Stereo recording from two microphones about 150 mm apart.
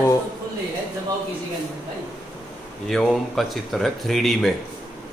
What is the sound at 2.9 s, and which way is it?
Speech, centre (ahead or behind).